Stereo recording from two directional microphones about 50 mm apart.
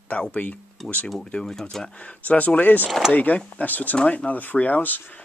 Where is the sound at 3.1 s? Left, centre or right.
Left.